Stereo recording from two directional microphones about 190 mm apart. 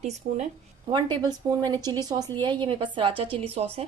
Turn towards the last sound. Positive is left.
turn(degrees=-30)  # may be behind; listen again after turning